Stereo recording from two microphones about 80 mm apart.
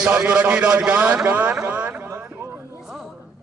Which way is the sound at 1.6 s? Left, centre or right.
Right.